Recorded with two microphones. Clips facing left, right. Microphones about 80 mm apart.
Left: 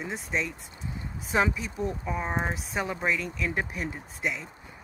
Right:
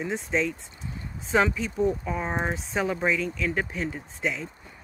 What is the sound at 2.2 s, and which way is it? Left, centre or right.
Speech, centre.